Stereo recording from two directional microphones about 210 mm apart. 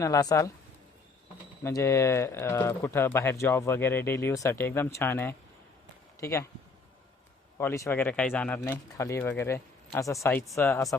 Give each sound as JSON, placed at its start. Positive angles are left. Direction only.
{"t": 0.0, "sound": "speech", "side_deg": 15}
{"t": 1.6, "sound": "speech", "side_deg": 15}
{"t": 7.6, "sound": "speech", "side_deg": 10}